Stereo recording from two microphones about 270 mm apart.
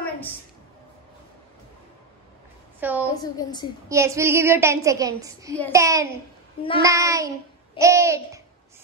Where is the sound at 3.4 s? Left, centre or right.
Centre.